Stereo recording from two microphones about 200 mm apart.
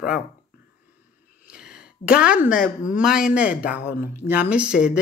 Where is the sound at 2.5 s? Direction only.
45° left (ahead or behind).